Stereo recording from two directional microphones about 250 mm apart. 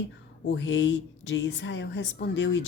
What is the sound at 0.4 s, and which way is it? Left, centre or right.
Speech, left.